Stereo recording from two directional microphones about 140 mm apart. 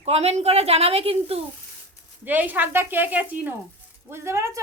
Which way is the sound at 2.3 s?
10° right (ahead or behind).